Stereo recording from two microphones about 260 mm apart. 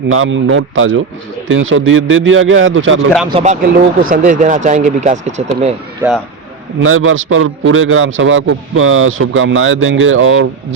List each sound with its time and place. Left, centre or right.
0.1 s a man's voice: right
3.2 s speech: right
6.0 s speech: centre
6.8 s a man's voice: right